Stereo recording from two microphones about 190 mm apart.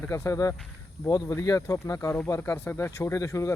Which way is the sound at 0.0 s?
15° left (ahead or behind).